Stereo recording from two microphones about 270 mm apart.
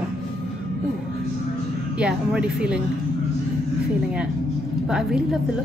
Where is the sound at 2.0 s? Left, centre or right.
Centre.